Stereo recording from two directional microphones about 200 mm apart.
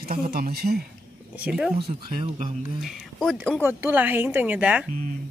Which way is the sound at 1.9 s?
30° right (ahead or behind).